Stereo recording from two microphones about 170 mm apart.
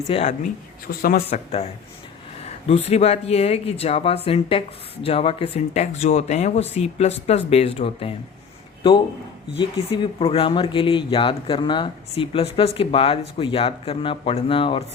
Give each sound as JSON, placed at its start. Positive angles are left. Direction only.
{"t": 0.1, "sound": "speech", "side_deg": 35}
{"t": 0.9, "sound": "speech", "side_deg": 60}
{"t": 1.3, "sound": "speech", "side_deg": 40}
{"t": 9.6, "sound": "speech", "side_deg": 30}